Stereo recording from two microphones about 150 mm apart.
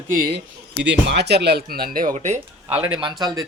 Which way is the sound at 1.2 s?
90° right.